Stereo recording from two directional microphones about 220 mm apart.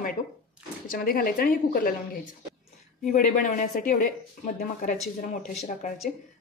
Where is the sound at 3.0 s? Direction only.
40° left (ahead or behind).